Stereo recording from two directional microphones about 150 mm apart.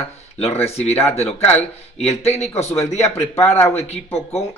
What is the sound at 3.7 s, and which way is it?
Speech, 45° left (ahead or behind).